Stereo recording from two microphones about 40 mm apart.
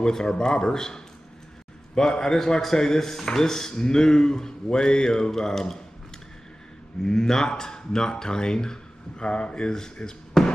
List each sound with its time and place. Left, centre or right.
0.0 s speech: centre
7.0 s speech: centre